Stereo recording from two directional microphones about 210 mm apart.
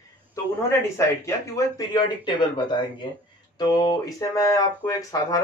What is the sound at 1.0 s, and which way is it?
Speech, 15° left (ahead or behind).